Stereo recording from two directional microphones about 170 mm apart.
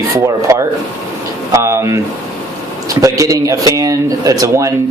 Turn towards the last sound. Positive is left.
turn(degrees=-20)  # may be behind; listen again after turning